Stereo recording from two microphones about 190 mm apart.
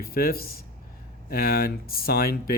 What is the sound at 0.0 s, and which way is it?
Speech, 50° left (ahead or behind).